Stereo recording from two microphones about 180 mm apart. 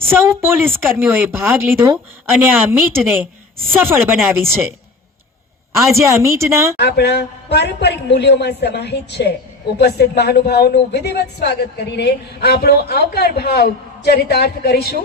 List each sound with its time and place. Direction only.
0.0 s a woman's voice: 15° right (ahead or behind)
5.7 s a woman's voice: 15° right (ahead or behind)
6.7 s a man's voice: 65° left (ahead or behind)